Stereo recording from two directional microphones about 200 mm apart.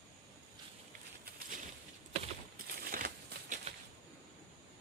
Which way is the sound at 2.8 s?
45° right (ahead or behind).